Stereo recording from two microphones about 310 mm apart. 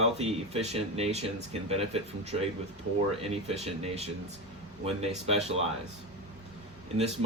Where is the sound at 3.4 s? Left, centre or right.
Right.